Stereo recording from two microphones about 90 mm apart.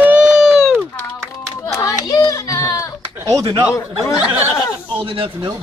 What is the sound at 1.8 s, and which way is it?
Speech, 40° left (ahead or behind).